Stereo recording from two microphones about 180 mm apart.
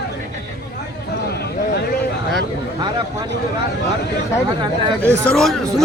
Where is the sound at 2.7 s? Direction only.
20° right (ahead or behind).